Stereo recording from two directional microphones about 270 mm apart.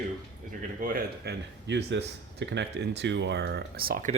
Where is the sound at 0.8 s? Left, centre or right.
Right.